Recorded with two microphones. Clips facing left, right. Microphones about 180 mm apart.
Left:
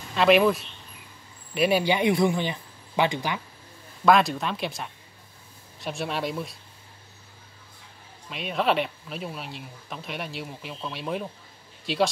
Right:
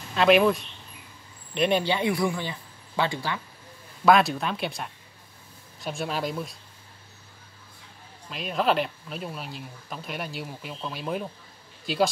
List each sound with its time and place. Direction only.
0.1 s a man's voice: centre (ahead or behind); by 3.3 s 15° left (ahead or behind)
4.0 s speech: centre (ahead or behind)
8.3 s speech: centre (ahead or behind)